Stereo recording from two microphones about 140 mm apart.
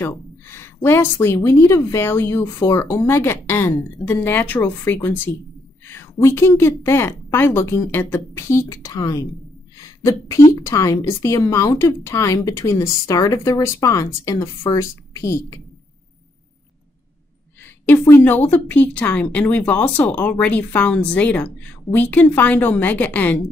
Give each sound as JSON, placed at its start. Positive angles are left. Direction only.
{"t": 0.0, "sound": "a woman's voice", "side_deg": 20}
{"t": 17.6, "sound": "a woman's voice", "side_deg": 15}